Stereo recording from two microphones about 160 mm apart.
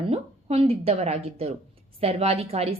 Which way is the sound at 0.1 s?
40° right (ahead or behind).